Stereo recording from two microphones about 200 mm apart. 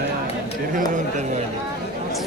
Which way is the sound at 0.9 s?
35° right (ahead or behind).